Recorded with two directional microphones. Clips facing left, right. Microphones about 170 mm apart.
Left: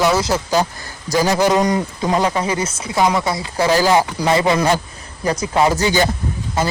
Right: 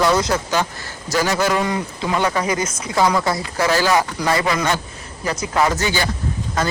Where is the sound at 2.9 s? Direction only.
20° left (ahead or behind).